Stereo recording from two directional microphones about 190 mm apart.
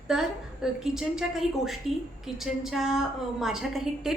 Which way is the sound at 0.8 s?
5° right (ahead or behind).